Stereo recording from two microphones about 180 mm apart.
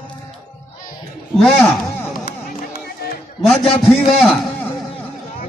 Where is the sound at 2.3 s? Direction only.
55° left (ahead or behind).